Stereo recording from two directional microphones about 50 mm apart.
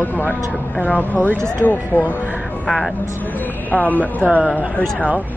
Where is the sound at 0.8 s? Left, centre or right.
Left.